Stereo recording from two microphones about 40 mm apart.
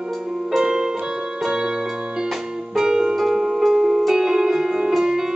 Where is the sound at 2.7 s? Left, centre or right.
Centre.